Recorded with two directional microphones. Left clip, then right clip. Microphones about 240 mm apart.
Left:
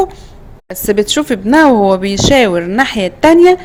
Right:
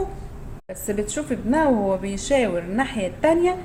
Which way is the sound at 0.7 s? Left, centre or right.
Left.